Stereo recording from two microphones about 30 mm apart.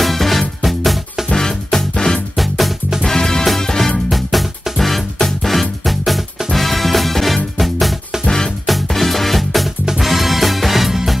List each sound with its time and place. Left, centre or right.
0.0 s music: centre
1.3 s music: centre
2.3 s music: centre
3.0 s music: centre
4.1 s music: centre